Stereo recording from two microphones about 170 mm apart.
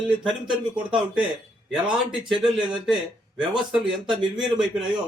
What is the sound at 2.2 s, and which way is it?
A man's voice, 5° right (ahead or behind).